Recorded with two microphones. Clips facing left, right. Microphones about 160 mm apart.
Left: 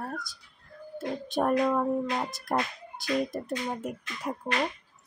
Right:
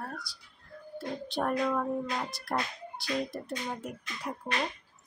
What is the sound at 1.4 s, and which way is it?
Speech, 20° left (ahead or behind).